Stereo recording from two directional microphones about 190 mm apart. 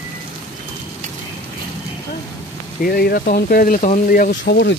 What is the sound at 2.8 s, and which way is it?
A man's voice, 55° left (ahead or behind).